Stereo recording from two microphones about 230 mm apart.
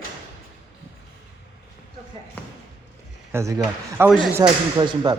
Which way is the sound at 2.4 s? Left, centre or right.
Centre.